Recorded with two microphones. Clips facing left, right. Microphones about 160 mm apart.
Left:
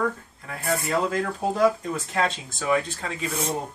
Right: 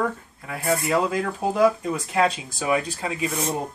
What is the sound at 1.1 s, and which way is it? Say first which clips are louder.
Speech: right 1 dB; 5° right (ahead or behind).